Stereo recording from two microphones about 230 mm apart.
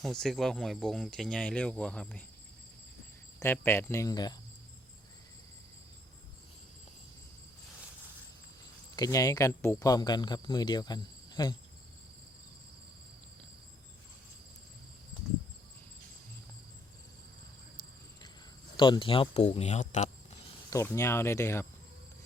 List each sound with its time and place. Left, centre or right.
0.0 s speech: centre
3.4 s speech: centre
9.0 s speech: centre
18.8 s speech: left
20.7 s speech: centre